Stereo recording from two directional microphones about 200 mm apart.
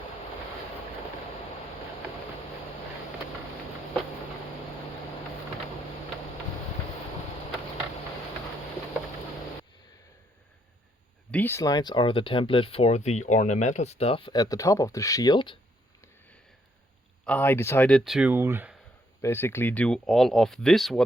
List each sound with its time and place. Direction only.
11.3 s speech: 10° left (ahead or behind)
17.2 s speech: 10° left (ahead or behind); by 18.8 s 10° right (ahead or behind)
19.2 s speech: 10° left (ahead or behind)